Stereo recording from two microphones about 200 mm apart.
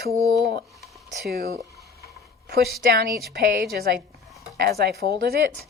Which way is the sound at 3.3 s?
50° right (ahead or behind).